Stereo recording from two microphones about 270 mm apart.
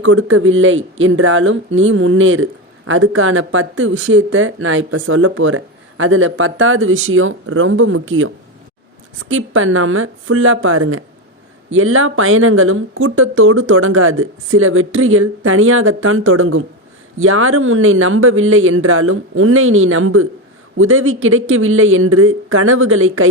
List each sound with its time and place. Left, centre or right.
0.0 s speech: right
9.3 s speech: right